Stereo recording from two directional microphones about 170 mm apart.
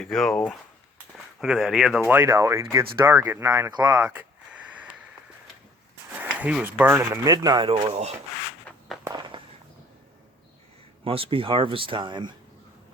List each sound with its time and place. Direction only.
0.0 s speech: centre (ahead or behind)
6.1 s speech: 10° right (ahead or behind); by 8.1 s 35° right (ahead or behind)
9.0 s a sound: 25° right (ahead or behind)
11.0 s speech: 30° right (ahead or behind)